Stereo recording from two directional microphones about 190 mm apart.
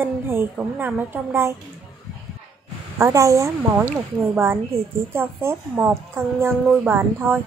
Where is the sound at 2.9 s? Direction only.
15° right (ahead or behind).